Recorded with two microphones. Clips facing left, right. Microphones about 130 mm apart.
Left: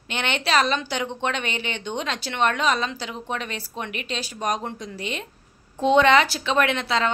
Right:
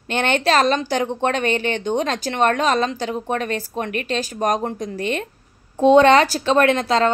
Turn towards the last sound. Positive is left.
turn(degrees=-40)  # may be behind; listen again after turning